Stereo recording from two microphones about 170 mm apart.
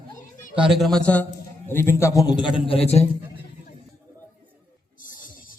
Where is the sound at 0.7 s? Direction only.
Centre (ahead or behind); by 3.1 s 35° left (ahead or behind).